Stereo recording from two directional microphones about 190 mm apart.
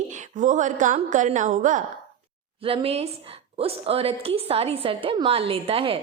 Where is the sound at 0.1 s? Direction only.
40° right (ahead or behind).